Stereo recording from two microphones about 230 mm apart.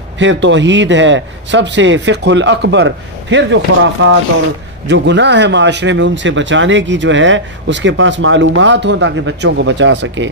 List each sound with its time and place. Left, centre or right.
0.2 s speech: right